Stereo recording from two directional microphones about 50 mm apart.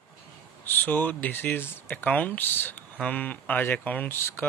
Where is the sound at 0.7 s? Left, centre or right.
Left.